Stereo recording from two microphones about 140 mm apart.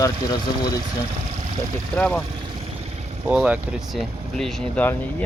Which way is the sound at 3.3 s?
10° right (ahead or behind).